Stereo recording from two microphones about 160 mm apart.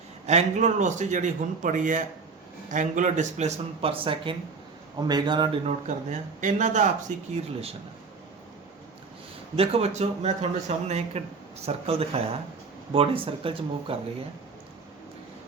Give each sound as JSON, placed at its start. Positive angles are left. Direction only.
{"t": 0.3, "sound": "a man's voice", "side_deg": -45}
{"t": 5.6, "sound": "a man's voice", "side_deg": -50}
{"t": 7.3, "sound": "speech", "side_deg": -40}
{"t": 9.6, "sound": "speech", "side_deg": -40}